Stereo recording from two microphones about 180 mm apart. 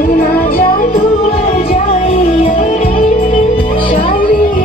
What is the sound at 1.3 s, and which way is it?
Music, 35° left (ahead or behind).